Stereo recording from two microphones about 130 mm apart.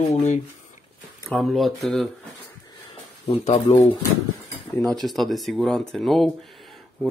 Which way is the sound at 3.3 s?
55° left (ahead or behind).